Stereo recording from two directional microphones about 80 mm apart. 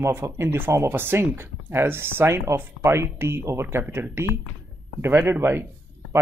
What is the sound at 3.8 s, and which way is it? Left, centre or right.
Speech, centre.